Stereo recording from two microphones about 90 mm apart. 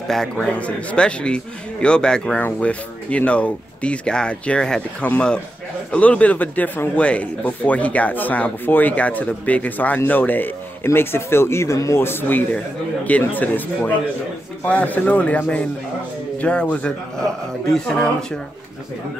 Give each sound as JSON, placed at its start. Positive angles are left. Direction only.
{"t": 0.1, "sound": "speech", "side_deg": 5}